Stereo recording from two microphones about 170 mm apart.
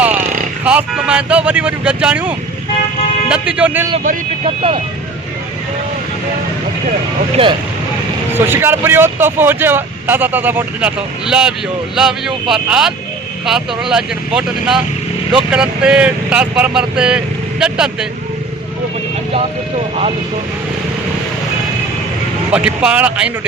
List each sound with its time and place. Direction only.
0.6 s speech: 10° right (ahead or behind)
4.4 s speech: 35° right (ahead or behind)
8.4 s speech: 15° right (ahead or behind)
22.5 s speech: 5° right (ahead or behind)